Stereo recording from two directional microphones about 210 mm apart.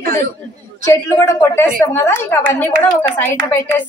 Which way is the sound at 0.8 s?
10° left (ahead or behind).